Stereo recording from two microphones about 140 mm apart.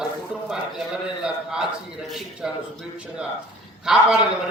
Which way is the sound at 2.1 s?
5° right (ahead or behind).